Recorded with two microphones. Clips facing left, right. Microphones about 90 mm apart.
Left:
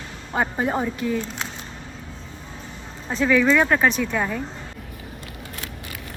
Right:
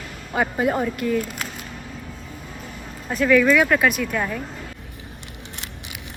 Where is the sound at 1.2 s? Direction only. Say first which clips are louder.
Right 1 dB; 5° right (ahead or behind).